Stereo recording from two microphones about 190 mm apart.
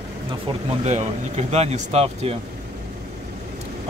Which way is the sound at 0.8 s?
35° right (ahead or behind).